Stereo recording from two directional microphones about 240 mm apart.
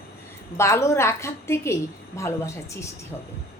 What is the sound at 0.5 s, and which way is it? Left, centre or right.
A woman's voice, centre.